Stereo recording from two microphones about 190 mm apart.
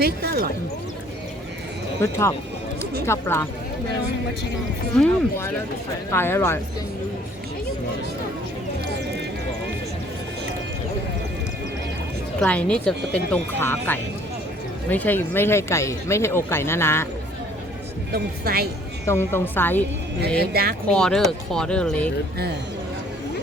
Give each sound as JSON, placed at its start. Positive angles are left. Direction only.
{"t": 0.0, "sound": "speech", "side_deg": -55}
{"t": 2.0, "sound": "speech", "side_deg": 15}
{"t": 4.9, "sound": "speech", "side_deg": 5}
{"t": 12.4, "sound": "speech", "side_deg": 5}
{"t": 18.1, "sound": "speech", "side_deg": -55}
{"t": 19.0, "sound": "speech", "side_deg": 10}
{"t": 20.4, "sound": "speech", "side_deg": -55}
{"t": 20.8, "sound": "speech", "side_deg": 5}